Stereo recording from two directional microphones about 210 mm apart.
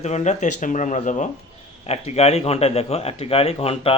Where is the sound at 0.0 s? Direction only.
35° left (ahead or behind).